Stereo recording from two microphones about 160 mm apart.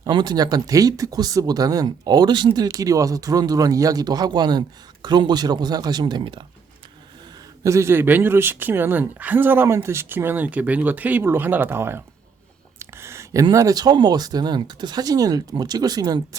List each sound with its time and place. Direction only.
0.0 s speech: 25° right (ahead or behind)
7.6 s speech: 20° right (ahead or behind)